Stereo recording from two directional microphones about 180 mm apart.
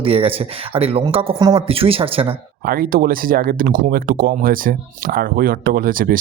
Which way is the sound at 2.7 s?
55° right (ahead or behind).